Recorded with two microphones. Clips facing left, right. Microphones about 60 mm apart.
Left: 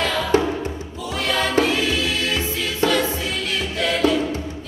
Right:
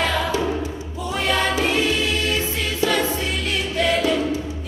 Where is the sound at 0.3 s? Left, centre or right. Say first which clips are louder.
Left 5 dB; left.